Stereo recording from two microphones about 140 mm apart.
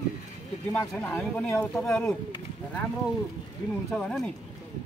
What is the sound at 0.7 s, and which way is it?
Speech, 15° left (ahead or behind).